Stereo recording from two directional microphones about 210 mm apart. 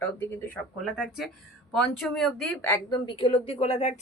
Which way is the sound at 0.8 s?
Centre (ahead or behind).